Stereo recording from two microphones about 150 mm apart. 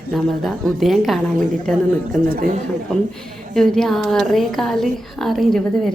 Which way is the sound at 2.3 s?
60° right (ahead or behind).